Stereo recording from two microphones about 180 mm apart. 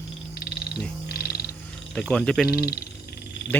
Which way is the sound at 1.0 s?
60° left (ahead or behind).